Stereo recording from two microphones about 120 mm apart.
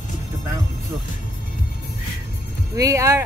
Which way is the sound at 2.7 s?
25° right (ahead or behind).